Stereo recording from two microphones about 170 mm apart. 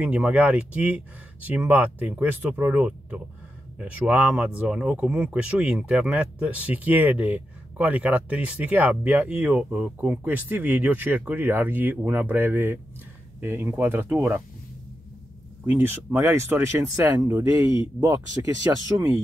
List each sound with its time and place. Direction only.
0.0 s speech: 10° right (ahead or behind)
15.6 s speech: 10° right (ahead or behind)